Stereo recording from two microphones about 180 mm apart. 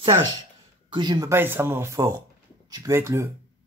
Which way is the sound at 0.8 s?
25° right (ahead or behind).